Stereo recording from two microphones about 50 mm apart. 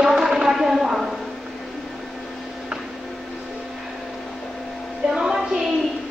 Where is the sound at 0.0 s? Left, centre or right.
Centre.